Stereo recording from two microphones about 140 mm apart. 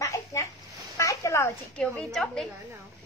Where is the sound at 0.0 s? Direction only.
20° left (ahead or behind).